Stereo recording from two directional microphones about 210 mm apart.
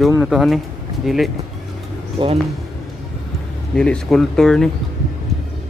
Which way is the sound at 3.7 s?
5° left (ahead or behind).